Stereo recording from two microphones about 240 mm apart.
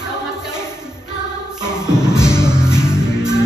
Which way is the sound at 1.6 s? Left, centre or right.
Centre.